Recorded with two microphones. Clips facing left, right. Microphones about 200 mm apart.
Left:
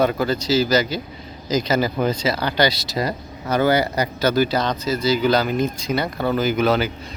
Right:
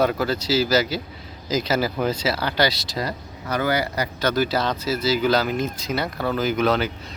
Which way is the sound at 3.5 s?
25° left (ahead or behind).